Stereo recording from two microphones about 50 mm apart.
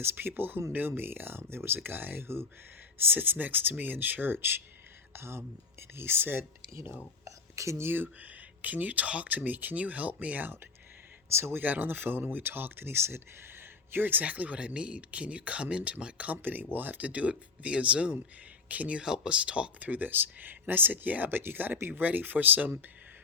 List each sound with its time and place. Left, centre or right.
0.0 s speech: right
3.0 s speech: right
5.1 s speech: right
7.3 s speech: right
7.9 s speech: right
8.3 s speech: right
11.3 s speech: right
11.5 s speech: right
19.9 s speech: right